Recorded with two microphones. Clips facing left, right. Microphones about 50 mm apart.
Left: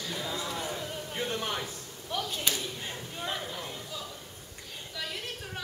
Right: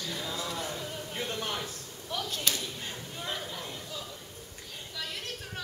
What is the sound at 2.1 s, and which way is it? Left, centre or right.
Clapping, centre.